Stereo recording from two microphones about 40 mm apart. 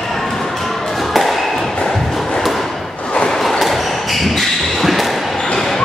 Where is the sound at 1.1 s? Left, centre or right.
Centre.